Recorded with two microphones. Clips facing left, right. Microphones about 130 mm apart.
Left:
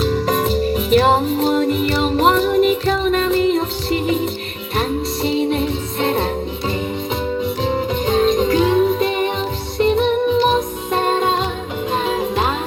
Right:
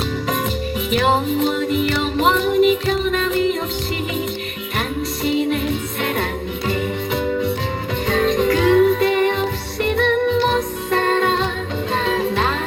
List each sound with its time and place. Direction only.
0.9 s music: 40° left (ahead or behind)
5.2 s music: 30° left (ahead or behind)
8.0 s music: 20° left (ahead or behind)